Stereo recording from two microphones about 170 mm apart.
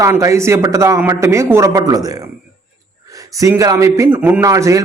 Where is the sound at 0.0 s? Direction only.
20° right (ahead or behind).